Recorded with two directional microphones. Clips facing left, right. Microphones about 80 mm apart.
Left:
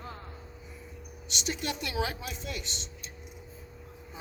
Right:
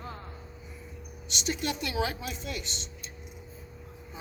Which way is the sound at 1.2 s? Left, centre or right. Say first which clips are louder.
Right 2 dB; centre.